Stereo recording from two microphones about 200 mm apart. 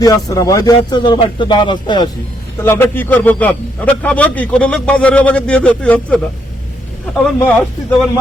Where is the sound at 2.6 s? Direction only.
10° left (ahead or behind).